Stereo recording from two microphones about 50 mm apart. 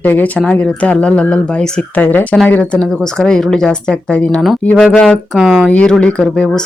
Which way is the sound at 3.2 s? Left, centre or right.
Centre.